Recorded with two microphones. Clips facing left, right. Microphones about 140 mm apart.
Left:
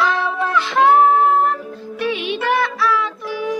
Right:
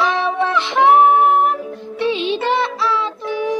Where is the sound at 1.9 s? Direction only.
25° right (ahead or behind).